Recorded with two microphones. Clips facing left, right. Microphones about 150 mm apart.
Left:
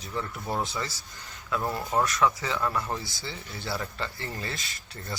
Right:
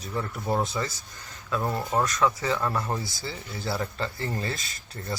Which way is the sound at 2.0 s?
20° right (ahead or behind).